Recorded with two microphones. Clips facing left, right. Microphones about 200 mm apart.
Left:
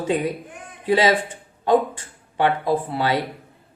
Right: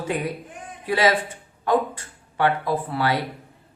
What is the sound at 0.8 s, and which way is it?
Speech, 25° left (ahead or behind).